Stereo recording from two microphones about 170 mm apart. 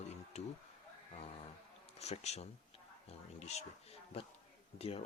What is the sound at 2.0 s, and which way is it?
Speech, 40° left (ahead or behind).